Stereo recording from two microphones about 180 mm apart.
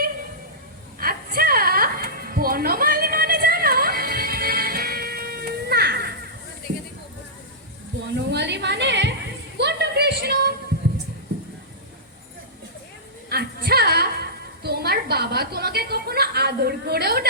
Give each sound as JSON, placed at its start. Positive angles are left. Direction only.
{"t": 0.9, "sound": "music", "side_deg": -55}
{"t": 8.3, "sound": "a sound", "side_deg": -75}
{"t": 13.3, "sound": "music", "side_deg": -60}